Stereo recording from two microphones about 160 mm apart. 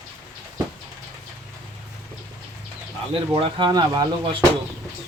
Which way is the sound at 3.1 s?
35° right (ahead or behind).